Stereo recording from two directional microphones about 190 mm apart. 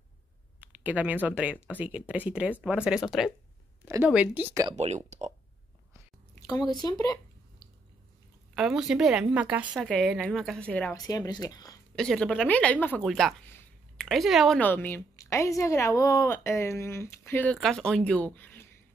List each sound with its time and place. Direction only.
0.6 s speech: 10° right (ahead or behind)
3.8 s a woman's voice: 15° right (ahead or behind)
4.7 s speech: 35° right (ahead or behind)
6.4 s speech: 20° left (ahead or behind)
8.5 s a woman's voice: 5° right (ahead or behind)
11.0 s speech: 20° left (ahead or behind)
11.9 s speech: 5° left (ahead or behind)